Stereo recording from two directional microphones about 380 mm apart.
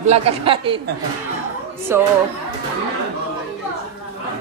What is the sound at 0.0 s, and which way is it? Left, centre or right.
Speech, centre.